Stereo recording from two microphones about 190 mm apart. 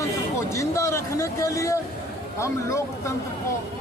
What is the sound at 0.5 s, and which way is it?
Speech, 15° left (ahead or behind).